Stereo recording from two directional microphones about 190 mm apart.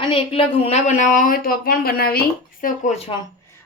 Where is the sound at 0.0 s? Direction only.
30° left (ahead or behind).